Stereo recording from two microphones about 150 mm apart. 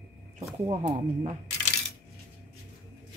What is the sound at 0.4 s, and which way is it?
Speech, 50° right (ahead or behind).